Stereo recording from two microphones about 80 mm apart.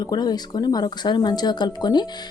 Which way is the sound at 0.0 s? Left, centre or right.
Left.